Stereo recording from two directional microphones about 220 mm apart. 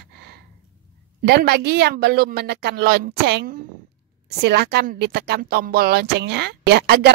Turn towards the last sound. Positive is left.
turn(degrees=-45)  # may be behind; listen again after turning